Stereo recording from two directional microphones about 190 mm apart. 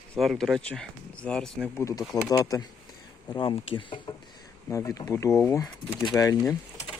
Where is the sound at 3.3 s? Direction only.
30° left (ahead or behind).